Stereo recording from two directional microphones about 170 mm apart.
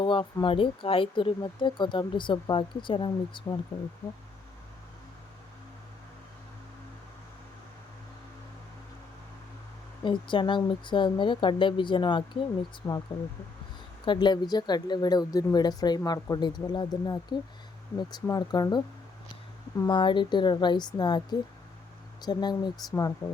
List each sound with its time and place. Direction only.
0.0 s speech: 30° left (ahead or behind)
10.0 s speech: 30° left (ahead or behind)
14.0 s speech: 25° left (ahead or behind)
19.8 s speech: 30° left (ahead or behind)